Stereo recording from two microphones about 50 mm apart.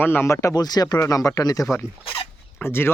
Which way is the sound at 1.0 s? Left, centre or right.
Left.